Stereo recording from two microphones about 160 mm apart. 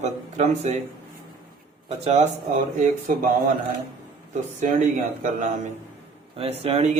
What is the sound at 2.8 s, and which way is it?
Speech, 55° right (ahead or behind).